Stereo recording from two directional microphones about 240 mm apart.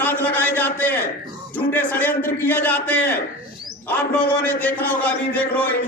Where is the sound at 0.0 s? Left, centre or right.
Centre.